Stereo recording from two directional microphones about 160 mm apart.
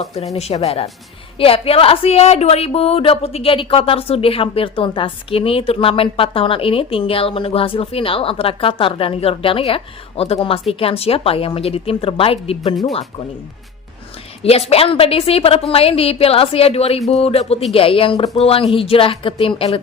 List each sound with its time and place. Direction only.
0.3 s speech: 40° left (ahead or behind)
14.4 s speech: 40° left (ahead or behind)